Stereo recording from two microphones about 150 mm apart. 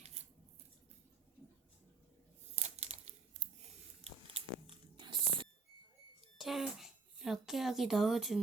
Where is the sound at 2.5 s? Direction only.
45° right (ahead or behind).